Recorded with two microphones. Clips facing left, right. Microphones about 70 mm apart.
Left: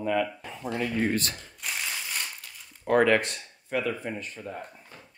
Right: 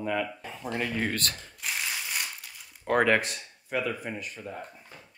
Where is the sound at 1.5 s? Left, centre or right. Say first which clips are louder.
Left 1 dB; centre.